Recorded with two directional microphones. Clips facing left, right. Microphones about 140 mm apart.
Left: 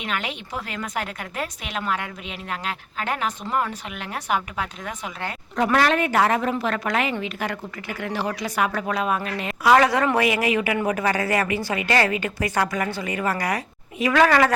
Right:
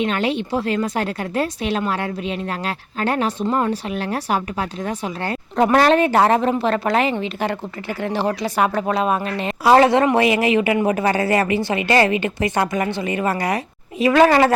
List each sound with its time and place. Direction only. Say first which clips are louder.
0.0 s speech: right 9 dB; 30° right (ahead or behind)